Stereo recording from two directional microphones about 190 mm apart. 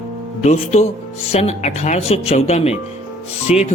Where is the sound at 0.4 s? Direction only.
35° left (ahead or behind).